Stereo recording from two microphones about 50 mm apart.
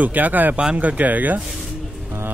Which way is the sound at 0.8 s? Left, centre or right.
Right.